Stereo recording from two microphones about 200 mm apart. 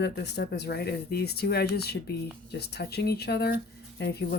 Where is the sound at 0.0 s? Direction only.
55° left (ahead or behind).